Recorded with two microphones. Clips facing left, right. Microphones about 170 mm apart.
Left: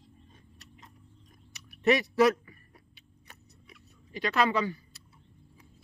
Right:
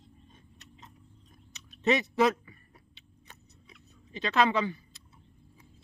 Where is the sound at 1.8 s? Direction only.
20° right (ahead or behind).